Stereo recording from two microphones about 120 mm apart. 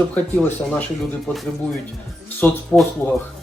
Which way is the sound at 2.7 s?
25° left (ahead or behind).